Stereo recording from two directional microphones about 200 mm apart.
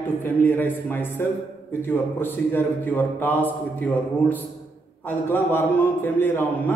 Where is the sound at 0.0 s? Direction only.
10° left (ahead or behind).